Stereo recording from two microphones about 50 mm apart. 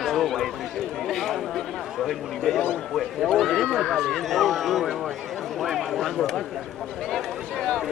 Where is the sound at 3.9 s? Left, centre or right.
Centre.